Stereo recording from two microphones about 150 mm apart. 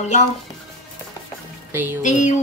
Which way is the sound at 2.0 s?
55° left (ahead or behind).